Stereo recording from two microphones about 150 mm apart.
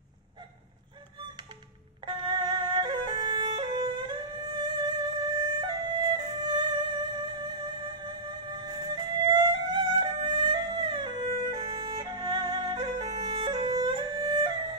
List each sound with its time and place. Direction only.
2.0 s music: 30° right (ahead or behind)
11.5 s music: 30° right (ahead or behind)